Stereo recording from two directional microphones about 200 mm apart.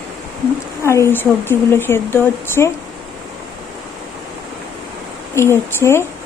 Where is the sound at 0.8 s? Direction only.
15° left (ahead or behind).